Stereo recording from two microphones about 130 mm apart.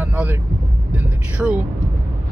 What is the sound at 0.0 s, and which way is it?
Vehicle, 10° right (ahead or behind).